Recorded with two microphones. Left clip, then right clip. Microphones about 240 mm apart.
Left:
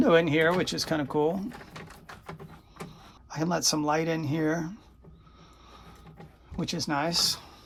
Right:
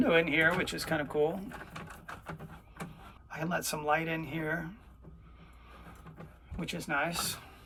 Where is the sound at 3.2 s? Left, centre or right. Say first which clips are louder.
Left 7 dB; left.